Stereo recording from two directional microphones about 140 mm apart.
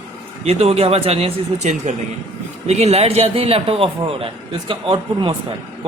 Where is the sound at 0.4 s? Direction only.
45° right (ahead or behind).